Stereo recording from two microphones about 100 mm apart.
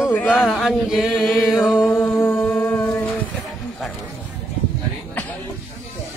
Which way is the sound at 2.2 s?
25° left (ahead or behind).